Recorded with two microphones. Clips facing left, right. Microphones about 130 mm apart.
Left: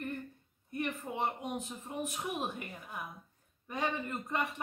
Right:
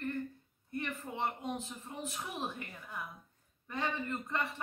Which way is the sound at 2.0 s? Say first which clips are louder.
Left 4 dB; 15° left (ahead or behind).